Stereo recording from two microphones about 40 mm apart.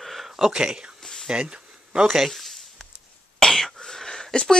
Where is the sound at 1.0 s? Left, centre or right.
Centre.